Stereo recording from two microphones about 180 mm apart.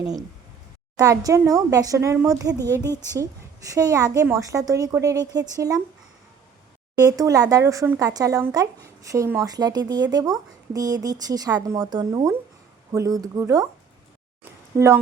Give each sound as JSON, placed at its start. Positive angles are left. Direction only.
{"t": 0.0, "sound": "speech", "side_deg": -20}
{"t": 7.0, "sound": "speech", "side_deg": -20}
{"t": 14.7, "sound": "speech", "side_deg": -15}